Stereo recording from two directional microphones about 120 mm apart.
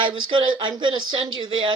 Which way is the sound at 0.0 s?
40° right (ahead or behind).